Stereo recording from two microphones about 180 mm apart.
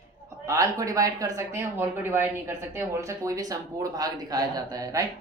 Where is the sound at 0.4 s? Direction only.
20° right (ahead or behind).